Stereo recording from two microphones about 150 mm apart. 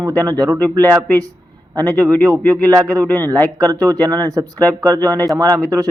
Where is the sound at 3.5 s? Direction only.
25° right (ahead or behind).